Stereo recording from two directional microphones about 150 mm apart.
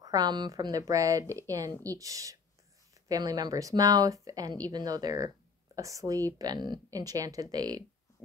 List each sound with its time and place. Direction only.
0.0 s speech: 25° right (ahead or behind)